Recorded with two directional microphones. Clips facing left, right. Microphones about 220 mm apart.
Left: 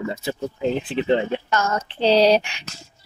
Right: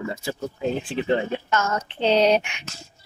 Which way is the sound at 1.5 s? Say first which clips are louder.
Left 1 dB; 35° left (ahead or behind).